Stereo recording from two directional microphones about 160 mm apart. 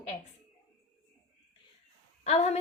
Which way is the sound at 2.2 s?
40° left (ahead or behind).